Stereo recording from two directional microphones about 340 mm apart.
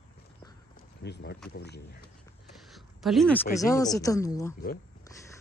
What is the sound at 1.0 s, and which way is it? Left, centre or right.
Speech, left.